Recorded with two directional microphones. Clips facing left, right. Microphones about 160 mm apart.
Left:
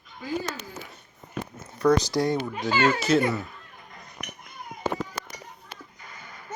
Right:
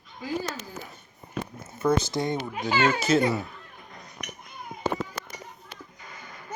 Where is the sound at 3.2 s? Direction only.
15° right (ahead or behind).